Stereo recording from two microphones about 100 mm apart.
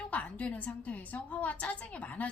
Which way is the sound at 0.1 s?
15° left (ahead or behind).